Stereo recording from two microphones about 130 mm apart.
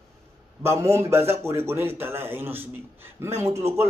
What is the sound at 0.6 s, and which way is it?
A man's voice, 20° right (ahead or behind).